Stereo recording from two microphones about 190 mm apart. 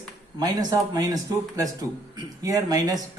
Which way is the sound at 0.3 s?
20° right (ahead or behind).